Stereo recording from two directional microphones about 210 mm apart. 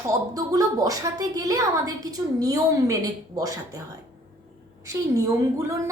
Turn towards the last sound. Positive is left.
turn(degrees=-15)  # may be behind; listen again after turning